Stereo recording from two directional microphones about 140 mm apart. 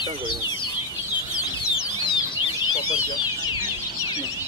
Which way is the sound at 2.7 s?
30° left (ahead or behind).